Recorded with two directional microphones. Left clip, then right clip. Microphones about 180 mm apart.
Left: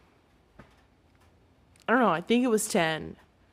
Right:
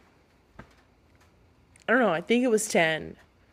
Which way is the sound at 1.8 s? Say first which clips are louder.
Right 1 dB; 25° left (ahead or behind).